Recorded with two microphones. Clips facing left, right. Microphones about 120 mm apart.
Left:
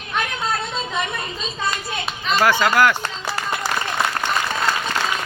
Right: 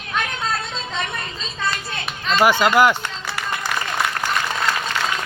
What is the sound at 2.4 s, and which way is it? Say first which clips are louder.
Speech: right 2 dB; 15° right (ahead or behind).